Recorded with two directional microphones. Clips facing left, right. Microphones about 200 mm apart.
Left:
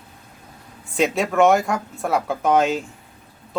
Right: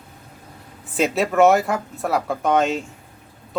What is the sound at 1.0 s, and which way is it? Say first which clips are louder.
Speech: right 1 dB; centre (ahead or behind).